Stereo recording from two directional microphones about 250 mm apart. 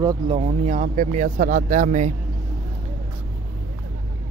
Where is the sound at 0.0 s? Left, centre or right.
Centre.